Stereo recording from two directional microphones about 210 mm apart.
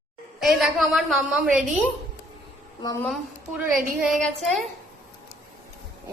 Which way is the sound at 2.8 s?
15° left (ahead or behind).